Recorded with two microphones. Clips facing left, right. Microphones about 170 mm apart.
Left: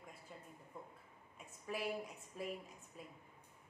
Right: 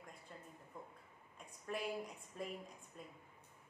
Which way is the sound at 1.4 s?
5° left (ahead or behind).